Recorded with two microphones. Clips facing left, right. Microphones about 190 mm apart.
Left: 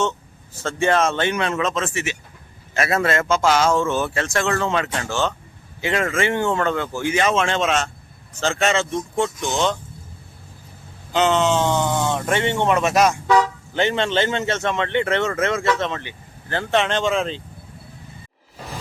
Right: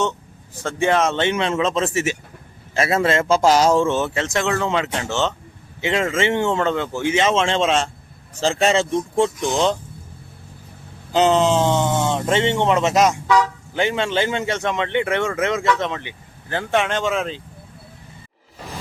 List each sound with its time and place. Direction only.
0.6 s a man's voice: 15° right (ahead or behind); by 2.1 s 40° right (ahead or behind)
2.7 s a man's voice: 25° right (ahead or behind)
11.1 s speech: 35° right (ahead or behind)
13.7 s speech: 10° right (ahead or behind)